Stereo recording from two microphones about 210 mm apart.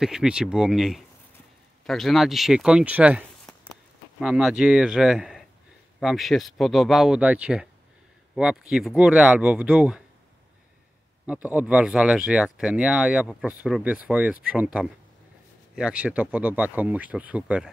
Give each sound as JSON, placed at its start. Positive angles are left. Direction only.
{"t": 0.0, "sound": "speech", "side_deg": -5}
{"t": 11.2, "sound": "speech", "side_deg": -5}